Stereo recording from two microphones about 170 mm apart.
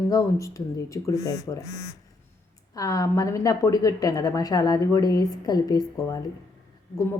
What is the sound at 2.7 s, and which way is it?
Speech, 20° left (ahead or behind).